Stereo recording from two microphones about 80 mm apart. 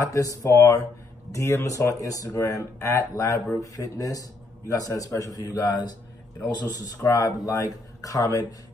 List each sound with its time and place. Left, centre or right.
0.0 s a man's voice: left
7.0 s a man's voice: left